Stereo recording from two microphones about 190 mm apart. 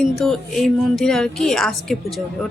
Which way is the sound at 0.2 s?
Centre (ahead or behind).